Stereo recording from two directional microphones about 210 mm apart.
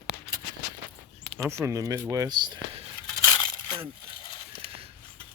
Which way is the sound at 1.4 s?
10° right (ahead or behind).